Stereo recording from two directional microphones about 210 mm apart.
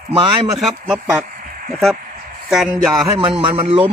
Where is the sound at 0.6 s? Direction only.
5° right (ahead or behind).